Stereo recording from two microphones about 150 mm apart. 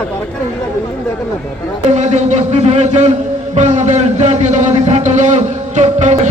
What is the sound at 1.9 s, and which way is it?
Speech, 50° right (ahead or behind).